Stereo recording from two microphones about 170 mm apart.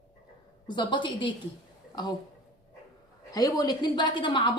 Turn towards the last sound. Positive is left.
turn(degrees=30)  # may be behind; listen again after turning